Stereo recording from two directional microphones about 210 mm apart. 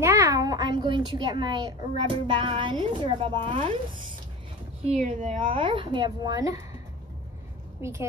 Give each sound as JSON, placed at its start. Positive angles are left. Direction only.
{"t": 0.0, "sound": "a child's voice", "side_deg": -15}
{"t": 4.8, "sound": "a child's voice", "side_deg": -35}
{"t": 7.8, "sound": "a woman's voice", "side_deg": -15}